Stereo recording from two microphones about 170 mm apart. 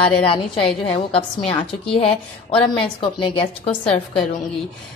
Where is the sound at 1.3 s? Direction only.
30° left (ahead or behind).